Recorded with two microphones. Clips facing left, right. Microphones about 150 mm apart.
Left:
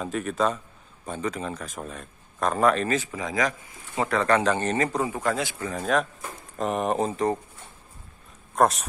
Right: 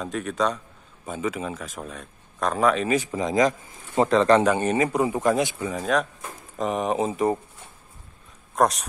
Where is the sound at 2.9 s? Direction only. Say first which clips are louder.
Right 4 dB; 15° right (ahead or behind).